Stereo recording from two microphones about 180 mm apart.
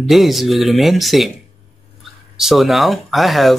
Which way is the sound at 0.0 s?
Centre (ahead or behind).